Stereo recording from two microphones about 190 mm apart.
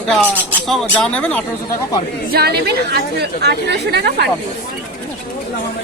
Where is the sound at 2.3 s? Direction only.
55° right (ahead or behind).